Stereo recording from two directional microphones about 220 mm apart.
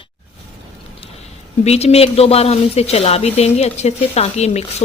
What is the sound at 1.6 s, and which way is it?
Speech, 30° left (ahead or behind).